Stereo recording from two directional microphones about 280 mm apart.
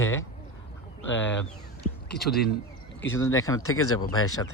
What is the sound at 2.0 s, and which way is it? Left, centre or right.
Speech, centre.